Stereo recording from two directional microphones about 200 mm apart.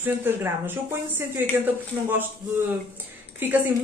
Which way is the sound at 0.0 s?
10° right (ahead or behind).